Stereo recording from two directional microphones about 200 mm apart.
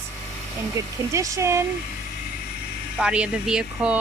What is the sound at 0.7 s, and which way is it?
Speech, 15° right (ahead or behind).